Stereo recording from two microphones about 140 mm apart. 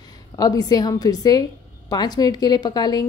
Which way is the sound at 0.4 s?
25° left (ahead or behind).